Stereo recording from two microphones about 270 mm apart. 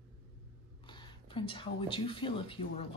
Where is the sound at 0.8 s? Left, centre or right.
Centre.